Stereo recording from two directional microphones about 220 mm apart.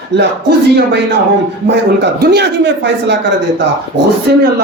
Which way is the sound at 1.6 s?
50° right (ahead or behind).